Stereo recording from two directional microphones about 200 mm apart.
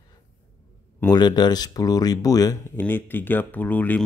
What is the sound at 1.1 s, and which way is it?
Speech, 20° left (ahead or behind).